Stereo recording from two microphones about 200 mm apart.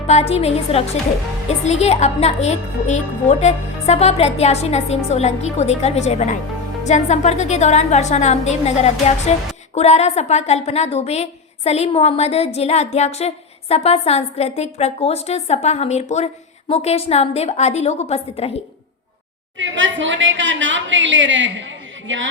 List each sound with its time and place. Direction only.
0.1 s a woman's voice: 30° left (ahead or behind)
19.5 s a woman's voice: 70° right (ahead or behind)